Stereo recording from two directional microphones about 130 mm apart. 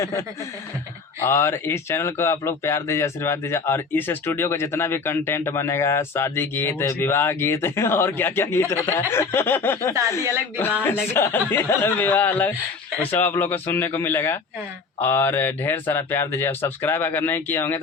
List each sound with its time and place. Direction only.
0.0 s speech: 25° left (ahead or behind)
11.1 s speech: 20° left (ahead or behind)